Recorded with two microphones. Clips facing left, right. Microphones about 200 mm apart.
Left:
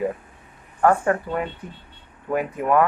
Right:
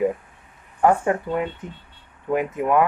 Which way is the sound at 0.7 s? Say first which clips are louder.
Even; 20° right (ahead or behind).